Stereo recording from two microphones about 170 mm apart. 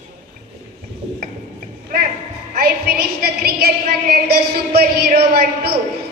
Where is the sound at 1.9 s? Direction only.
55° right (ahead or behind).